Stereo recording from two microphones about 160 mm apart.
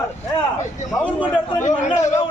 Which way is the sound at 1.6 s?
50° left (ahead or behind).